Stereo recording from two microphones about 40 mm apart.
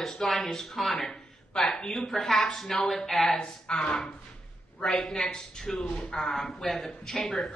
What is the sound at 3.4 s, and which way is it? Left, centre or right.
A woman's voice, left.